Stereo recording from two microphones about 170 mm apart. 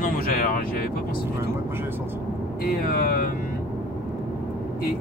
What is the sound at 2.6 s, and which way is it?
Speech, 60° left (ahead or behind).